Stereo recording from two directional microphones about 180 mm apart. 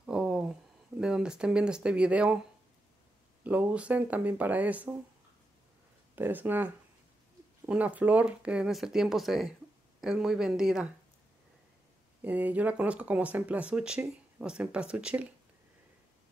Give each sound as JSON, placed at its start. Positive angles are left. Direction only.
{"t": 0.0, "sound": "a sound", "side_deg": -5}
{"t": 3.4, "sound": "speech", "side_deg": -10}
{"t": 6.1, "sound": "speech", "side_deg": -10}
{"t": 12.2, "sound": "speech", "side_deg": -10}